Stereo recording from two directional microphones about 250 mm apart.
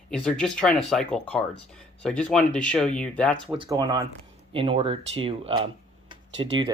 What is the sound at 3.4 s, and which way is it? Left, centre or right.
Speech, right.